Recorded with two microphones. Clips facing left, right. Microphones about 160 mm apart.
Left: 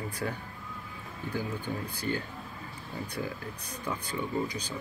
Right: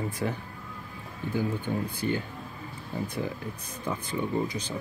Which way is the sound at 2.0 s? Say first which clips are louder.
Right 1 dB; 20° right (ahead or behind).